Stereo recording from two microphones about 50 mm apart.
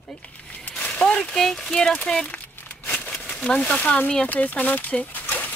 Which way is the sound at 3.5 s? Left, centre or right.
Left.